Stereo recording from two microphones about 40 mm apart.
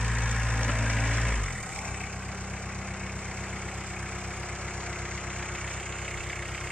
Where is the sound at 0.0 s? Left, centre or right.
Centre.